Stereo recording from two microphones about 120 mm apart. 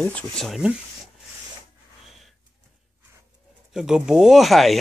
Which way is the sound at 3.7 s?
5° right (ahead or behind).